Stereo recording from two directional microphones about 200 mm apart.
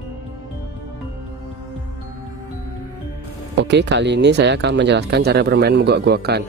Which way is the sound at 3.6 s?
60° right (ahead or behind).